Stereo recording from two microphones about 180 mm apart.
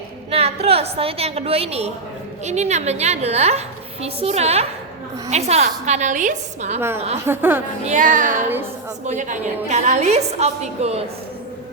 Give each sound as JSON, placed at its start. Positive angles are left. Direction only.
{"t": 0.3, "sound": "a woman's voice", "side_deg": -35}
{"t": 6.7, "sound": "a woman's voice", "side_deg": -15}
{"t": 7.9, "sound": "music", "side_deg": -45}
{"t": 9.0, "sound": "a woman's voice", "side_deg": -45}